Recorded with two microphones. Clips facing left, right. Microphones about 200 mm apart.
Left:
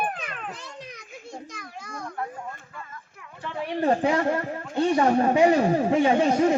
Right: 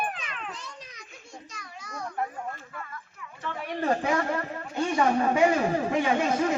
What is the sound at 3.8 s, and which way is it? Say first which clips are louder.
Speech: left 4 dB; 30° left (ahead or behind).